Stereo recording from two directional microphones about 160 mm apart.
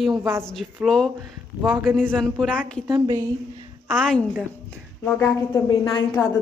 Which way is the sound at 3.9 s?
5° left (ahead or behind).